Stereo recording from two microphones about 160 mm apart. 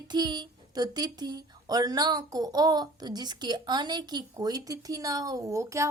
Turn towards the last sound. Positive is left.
turn(degrees=-20)  # may be behind; listen again after turning